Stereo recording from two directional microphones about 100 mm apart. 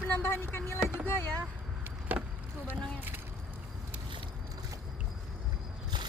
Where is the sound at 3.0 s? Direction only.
20° right (ahead or behind).